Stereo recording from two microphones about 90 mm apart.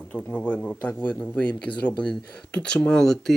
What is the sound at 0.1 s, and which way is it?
Speech, 15° left (ahead or behind).